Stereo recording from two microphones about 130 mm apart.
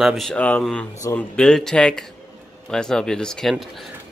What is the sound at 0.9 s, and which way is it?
Speech, 20° left (ahead or behind).